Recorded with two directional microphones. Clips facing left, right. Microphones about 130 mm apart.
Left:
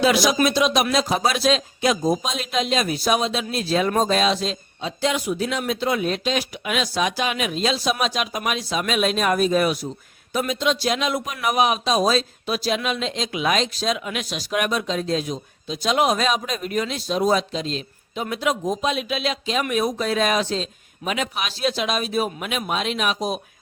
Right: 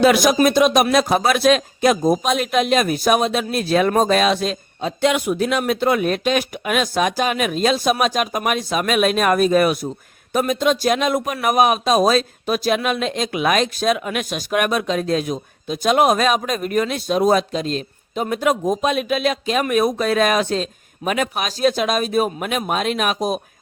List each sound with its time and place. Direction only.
0.0 s a man's voice: 55° right (ahead or behind)